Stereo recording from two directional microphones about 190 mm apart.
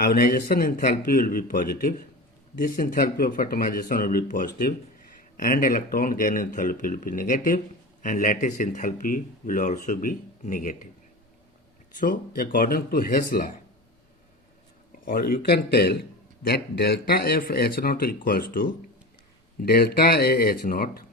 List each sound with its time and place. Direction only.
0.0 s speech: 50° left (ahead or behind)
11.9 s speech: 50° left (ahead or behind)
15.0 s speech: 50° left (ahead or behind)